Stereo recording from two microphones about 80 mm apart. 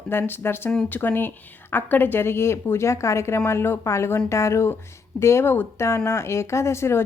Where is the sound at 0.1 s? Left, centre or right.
Left.